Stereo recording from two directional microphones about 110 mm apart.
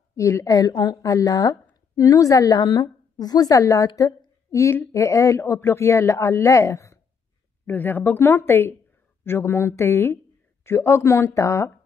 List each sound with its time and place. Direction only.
0.1 s a woman's voice: 30° left (ahead or behind)